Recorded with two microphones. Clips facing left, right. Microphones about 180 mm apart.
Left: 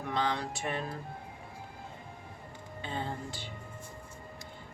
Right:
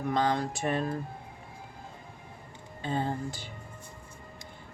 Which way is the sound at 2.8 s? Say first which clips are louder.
Right 6 dB; 40° right (ahead or behind).